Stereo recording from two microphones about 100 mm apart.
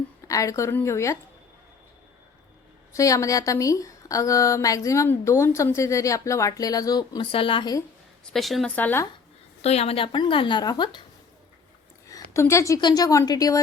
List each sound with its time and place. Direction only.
0.3 s a woman's voice: 35° left (ahead or behind)
2.9 s speech: 30° left (ahead or behind)
7.2 s a woman's voice: 65° left (ahead or behind)
8.2 s a woman's voice: 5° left (ahead or behind)
8.6 s speech: 15° left (ahead or behind)
9.6 s a woman's voice: 90° left; by 11.0 s 50° left (ahead or behind)
12.0 s a sound: 30° left (ahead or behind)
12.8 s speech: 40° left (ahead or behind)